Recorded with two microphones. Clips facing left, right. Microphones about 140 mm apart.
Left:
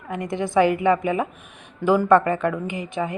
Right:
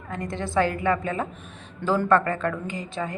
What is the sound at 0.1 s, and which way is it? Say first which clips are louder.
A woman's voice: left 4 dB; 15° left (ahead or behind).